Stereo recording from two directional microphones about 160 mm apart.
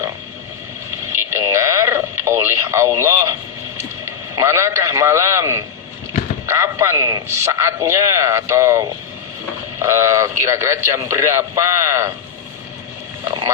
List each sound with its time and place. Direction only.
1.1 s radio: 15° right (ahead or behind)
3.8 s a man's voice: 15° right (ahead or behind)